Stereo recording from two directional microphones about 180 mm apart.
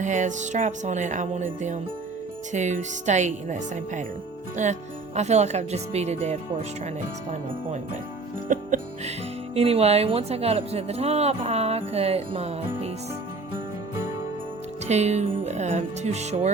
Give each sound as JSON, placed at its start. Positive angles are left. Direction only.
{"t": 0.0, "sound": "music", "side_deg": -40}
{"t": 4.5, "sound": "speech", "side_deg": -40}
{"t": 8.4, "sound": "music", "side_deg": -45}
{"t": 9.6, "sound": "speech", "side_deg": -35}
{"t": 14.8, "sound": "speech", "side_deg": -40}